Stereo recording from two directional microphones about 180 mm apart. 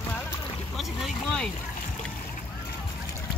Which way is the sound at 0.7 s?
Centre (ahead or behind).